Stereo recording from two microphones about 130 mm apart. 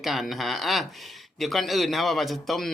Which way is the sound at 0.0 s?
Centre (ahead or behind).